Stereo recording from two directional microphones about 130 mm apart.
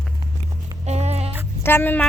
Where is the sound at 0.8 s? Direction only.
55° right (ahead or behind).